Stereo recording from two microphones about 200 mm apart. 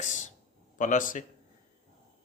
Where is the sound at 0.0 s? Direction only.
40° left (ahead or behind).